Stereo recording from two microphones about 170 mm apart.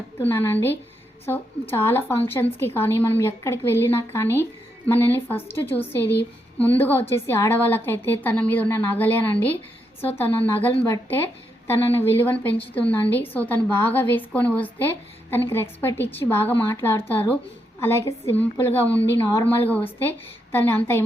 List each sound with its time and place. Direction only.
0.2 s a woman's voice: 15° left (ahead or behind)